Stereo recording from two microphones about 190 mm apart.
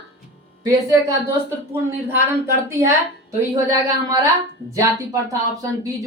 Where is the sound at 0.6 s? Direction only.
15° right (ahead or behind).